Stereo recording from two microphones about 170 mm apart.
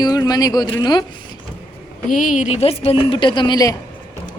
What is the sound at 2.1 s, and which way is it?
A woman's voice, 55° left (ahead or behind).